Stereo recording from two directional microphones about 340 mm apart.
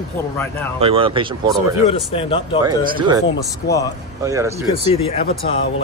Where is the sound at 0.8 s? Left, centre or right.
Centre.